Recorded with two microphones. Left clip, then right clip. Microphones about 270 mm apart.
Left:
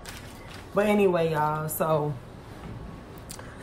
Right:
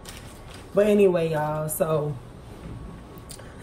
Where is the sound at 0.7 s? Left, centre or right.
Centre.